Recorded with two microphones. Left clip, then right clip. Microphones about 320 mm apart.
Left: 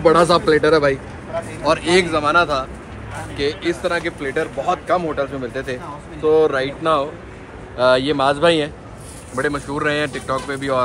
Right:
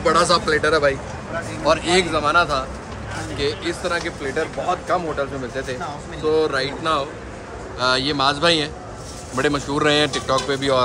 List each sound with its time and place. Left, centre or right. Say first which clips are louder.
0.0 s a man's voice: left 3 dB; centre
7.7 s speech: left 4 dB; centre